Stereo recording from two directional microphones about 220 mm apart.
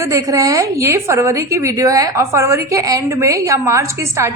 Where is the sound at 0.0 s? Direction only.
15° right (ahead or behind).